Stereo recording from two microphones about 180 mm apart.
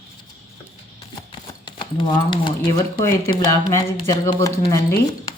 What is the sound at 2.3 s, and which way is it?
Speech, 25° left (ahead or behind).